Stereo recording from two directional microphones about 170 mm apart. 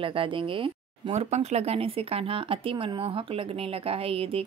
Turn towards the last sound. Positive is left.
turn(degrees=-35)  # may be behind; listen again after turning